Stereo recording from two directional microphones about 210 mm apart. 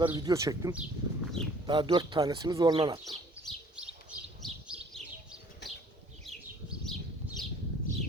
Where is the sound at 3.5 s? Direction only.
5° right (ahead or behind).